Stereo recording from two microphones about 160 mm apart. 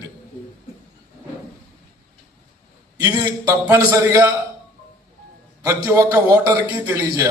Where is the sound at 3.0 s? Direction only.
25° right (ahead or behind).